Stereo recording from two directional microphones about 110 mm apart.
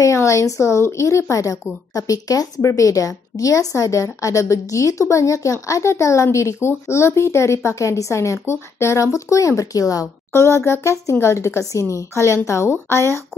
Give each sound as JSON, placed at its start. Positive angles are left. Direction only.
{"t": 0.0, "sound": "a woman's voice", "side_deg": 30}